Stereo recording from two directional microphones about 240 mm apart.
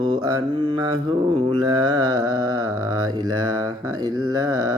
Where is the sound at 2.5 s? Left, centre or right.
Centre.